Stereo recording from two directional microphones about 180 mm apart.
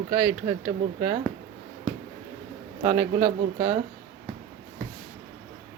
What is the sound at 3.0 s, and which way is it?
Speech, 10° right (ahead or behind).